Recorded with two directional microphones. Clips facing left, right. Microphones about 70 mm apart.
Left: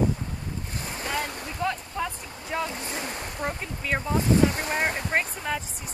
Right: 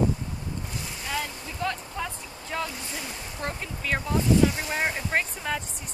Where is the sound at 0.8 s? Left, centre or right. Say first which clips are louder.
Left 3 dB; left.